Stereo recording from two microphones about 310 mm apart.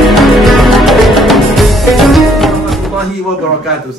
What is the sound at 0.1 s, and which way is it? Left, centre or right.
Music, centre.